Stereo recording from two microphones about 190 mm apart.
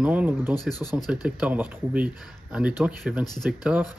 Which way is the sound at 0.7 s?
20° left (ahead or behind).